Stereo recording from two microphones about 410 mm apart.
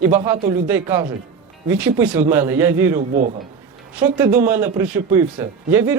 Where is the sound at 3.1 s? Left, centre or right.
Centre.